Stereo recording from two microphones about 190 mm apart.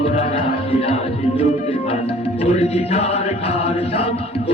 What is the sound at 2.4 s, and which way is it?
Chant, 35° left (ahead or behind).